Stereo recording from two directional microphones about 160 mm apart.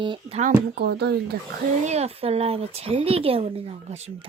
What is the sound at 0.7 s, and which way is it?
Speech, 90° right.